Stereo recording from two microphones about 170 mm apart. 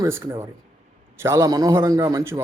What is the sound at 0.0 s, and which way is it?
Speech, 15° right (ahead or behind).